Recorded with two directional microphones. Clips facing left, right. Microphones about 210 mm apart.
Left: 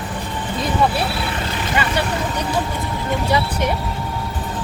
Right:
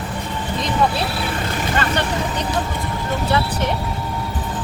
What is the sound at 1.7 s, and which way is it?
Speech, 10° left (ahead or behind).